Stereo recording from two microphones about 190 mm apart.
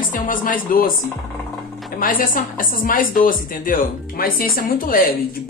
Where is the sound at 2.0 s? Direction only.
45° left (ahead or behind).